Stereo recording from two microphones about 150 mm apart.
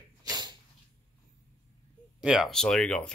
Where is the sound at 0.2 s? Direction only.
25° right (ahead or behind).